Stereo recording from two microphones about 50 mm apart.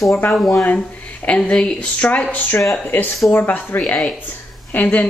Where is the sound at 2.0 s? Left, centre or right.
Left.